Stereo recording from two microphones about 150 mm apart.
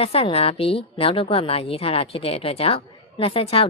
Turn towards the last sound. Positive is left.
turn(degrees=40)  # may be behind; listen again after turning